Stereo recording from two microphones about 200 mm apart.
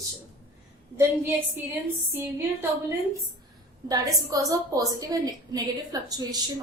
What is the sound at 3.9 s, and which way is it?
A woman's voice, 20° right (ahead or behind).